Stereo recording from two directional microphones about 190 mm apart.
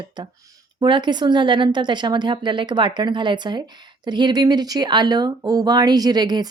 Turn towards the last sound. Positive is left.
turn(degrees=-20)  # may be behind; listen again after turning